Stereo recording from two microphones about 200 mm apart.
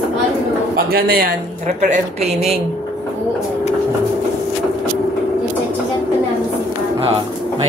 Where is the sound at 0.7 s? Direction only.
50° right (ahead or behind).